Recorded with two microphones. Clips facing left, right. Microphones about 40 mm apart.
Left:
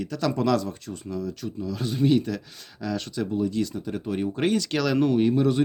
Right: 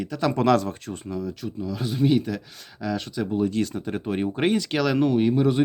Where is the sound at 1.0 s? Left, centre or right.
Centre.